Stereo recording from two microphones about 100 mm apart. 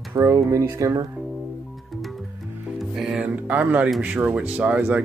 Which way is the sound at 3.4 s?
15° right (ahead or behind).